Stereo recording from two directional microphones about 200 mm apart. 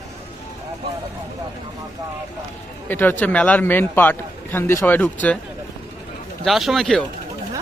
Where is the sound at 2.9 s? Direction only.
10° left (ahead or behind).